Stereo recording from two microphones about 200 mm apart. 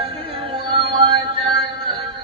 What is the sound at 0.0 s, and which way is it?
Music, 25° right (ahead or behind).